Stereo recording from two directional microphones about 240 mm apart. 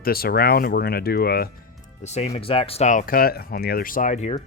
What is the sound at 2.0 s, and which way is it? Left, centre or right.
Speech, left.